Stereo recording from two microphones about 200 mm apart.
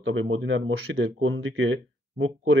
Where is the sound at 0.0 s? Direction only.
70° right (ahead or behind).